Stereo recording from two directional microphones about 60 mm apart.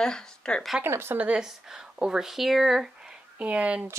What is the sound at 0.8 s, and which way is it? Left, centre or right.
Speech, right.